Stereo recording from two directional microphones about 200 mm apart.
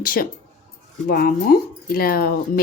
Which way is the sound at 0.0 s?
45° left (ahead or behind).